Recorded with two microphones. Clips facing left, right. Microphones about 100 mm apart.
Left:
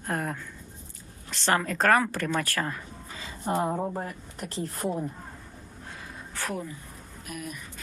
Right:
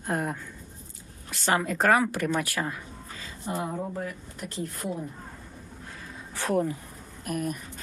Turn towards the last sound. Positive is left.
turn(degrees=-45)  # may be behind; listen again after turning